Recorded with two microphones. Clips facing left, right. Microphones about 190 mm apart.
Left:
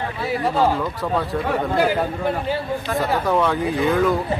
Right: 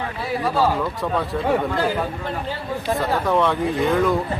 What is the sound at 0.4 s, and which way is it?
Speech, 25° left (ahead or behind).